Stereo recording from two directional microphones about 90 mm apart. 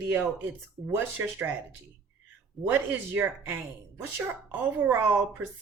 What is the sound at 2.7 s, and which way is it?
Speech, 20° right (ahead or behind).